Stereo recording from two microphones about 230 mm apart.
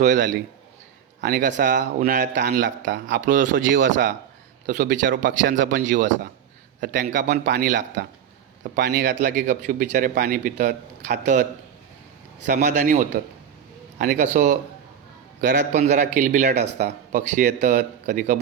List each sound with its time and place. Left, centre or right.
0.0 s a man's voice: right
2.4 s a man's voice: right
3.1 s a man's voice: right
4.6 s a man's voice: right
5.1 s a man's voice: right
5.5 s a man's voice: right
9.2 s a man's voice: right